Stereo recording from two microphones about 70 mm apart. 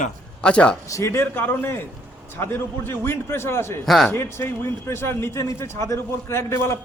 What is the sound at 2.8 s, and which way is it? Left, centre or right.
A man's voice, left.